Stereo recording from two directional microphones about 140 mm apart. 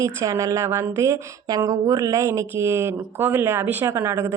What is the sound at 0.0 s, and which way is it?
A woman's voice, 20° right (ahead or behind).